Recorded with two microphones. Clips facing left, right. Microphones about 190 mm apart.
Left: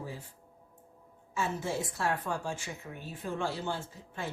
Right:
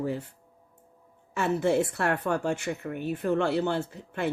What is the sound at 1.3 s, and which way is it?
A woman's voice, 65° right (ahead or behind).